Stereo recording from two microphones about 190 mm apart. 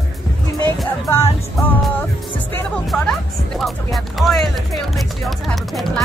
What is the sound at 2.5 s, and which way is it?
Music, 5° left (ahead or behind).